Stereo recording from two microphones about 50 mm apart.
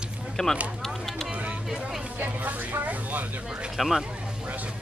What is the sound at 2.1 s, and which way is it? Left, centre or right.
Speech, right.